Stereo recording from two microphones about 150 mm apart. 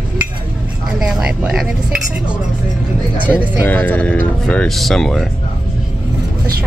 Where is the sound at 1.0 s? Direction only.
5° right (ahead or behind).